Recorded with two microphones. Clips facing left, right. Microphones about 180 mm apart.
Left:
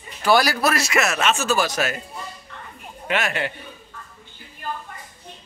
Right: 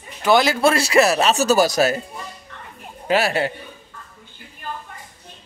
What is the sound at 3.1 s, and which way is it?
Speech, 35° right (ahead or behind).